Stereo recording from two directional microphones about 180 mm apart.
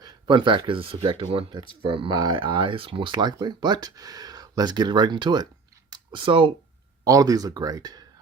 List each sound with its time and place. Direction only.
0.0 s speech: 25° right (ahead or behind)
5.9 s a sound: 30° right (ahead or behind)
7.0 s speech: 20° right (ahead or behind)